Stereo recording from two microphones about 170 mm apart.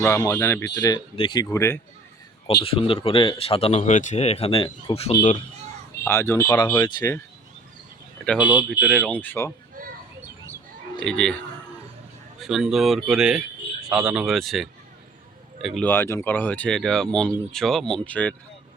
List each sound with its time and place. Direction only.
0.3 s speech: 15° left (ahead or behind)
1.5 s speech: 15° left (ahead or behind)
2.6 s speech: 30° left (ahead or behind)
6.1 s speech: 15° left (ahead or behind)
8.4 s speech: 10° right (ahead or behind)
9.1 s speech: 10° left (ahead or behind)
9.8 s a sound: 55° right (ahead or behind)
11.0 s speech: 5° left (ahead or behind)
12.4 s speech: 5° right (ahead or behind)